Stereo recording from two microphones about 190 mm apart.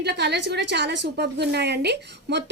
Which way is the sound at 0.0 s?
60° right (ahead or behind).